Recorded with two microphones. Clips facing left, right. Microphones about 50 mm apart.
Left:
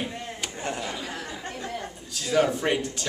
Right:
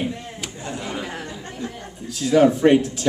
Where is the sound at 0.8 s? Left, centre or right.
Right.